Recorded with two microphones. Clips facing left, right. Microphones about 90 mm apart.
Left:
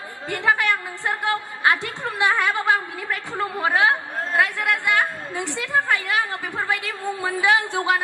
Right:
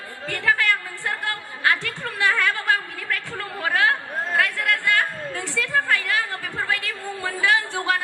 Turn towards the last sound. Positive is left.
turn(degrees=20)  # may be behind; listen again after turning